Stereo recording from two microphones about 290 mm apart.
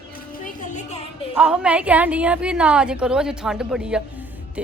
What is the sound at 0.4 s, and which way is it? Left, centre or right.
Music, left.